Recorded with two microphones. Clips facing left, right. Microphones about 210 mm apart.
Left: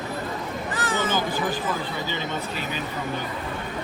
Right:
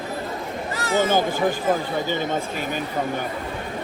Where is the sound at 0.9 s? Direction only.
45° right (ahead or behind).